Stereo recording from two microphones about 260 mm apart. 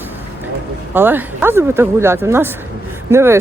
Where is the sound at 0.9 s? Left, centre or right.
Centre.